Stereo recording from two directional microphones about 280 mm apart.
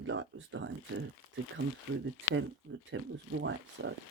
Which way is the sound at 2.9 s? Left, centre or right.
Right.